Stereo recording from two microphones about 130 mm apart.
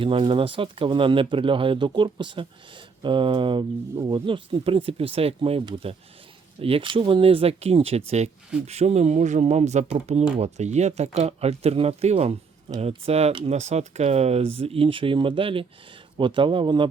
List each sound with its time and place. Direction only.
0.0 s speech: 45° right (ahead or behind)